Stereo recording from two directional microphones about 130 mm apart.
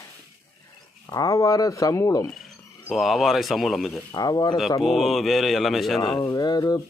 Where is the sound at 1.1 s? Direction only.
25° left (ahead or behind).